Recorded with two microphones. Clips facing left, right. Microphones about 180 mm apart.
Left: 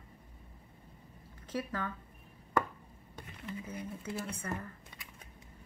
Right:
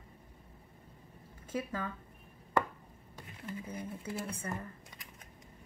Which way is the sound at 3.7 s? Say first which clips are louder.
Even; 30° right (ahead or behind).